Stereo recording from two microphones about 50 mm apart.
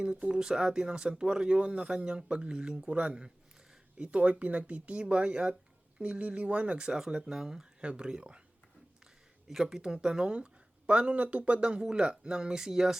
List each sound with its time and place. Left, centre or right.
0.0 s speech: centre
6.9 s speech: centre
9.5 s speech: centre